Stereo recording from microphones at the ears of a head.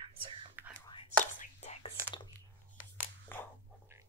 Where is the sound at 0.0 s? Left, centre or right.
Right.